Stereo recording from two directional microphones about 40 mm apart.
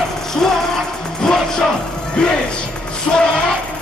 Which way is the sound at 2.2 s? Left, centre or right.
Left.